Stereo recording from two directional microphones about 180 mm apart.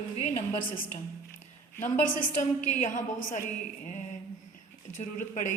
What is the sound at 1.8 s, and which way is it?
A woman's voice, 45° left (ahead or behind).